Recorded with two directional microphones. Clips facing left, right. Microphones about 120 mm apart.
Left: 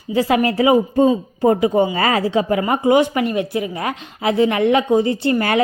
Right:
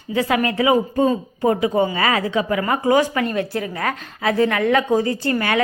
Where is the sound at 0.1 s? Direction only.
30° left (ahead or behind).